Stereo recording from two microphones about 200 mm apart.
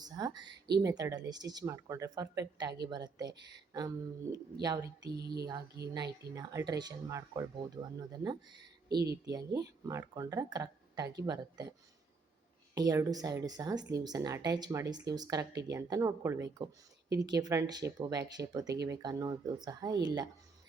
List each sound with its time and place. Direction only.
0.0 s speech: 20° right (ahead or behind)
5.1 s a sound: 55° right (ahead or behind)
6.3 s speech: 20° right (ahead or behind)
8.9 s a sound: 55° right (ahead or behind)
9.2 s speech: 15° right (ahead or behind)
12.7 s speech: 20° right (ahead or behind)